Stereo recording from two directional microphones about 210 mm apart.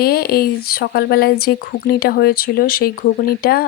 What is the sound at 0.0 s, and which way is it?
Speech, 45° left (ahead or behind).